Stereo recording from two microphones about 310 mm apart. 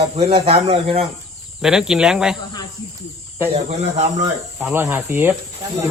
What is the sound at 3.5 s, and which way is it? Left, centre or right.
Speech, right.